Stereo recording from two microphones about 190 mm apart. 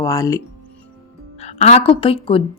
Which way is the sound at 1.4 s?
35° left (ahead or behind).